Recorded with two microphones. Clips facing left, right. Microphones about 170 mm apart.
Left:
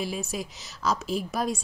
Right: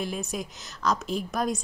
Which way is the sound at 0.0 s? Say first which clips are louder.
Even; centre (ahead or behind).